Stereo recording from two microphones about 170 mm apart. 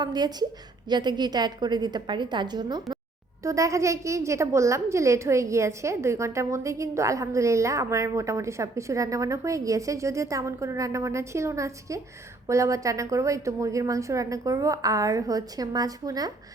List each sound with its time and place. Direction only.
0.0 s a woman's voice: 25° right (ahead or behind)